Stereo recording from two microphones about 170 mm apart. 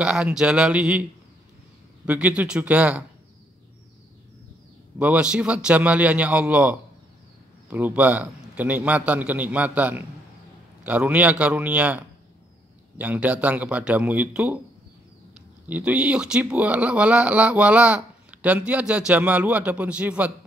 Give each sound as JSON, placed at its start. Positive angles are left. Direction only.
{"t": 0.0, "sound": "speech", "side_deg": -5}
{"t": 2.0, "sound": "speech", "side_deg": -10}
{"t": 4.9, "sound": "speech", "side_deg": -5}
{"t": 15.6, "sound": "speech", "side_deg": -10}